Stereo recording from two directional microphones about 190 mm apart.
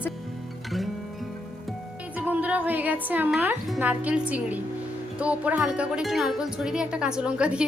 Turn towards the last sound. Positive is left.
turn(degrees=-5)  # may be behind; listen again after turning